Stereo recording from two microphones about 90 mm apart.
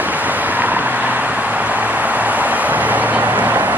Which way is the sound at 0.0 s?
20° right (ahead or behind).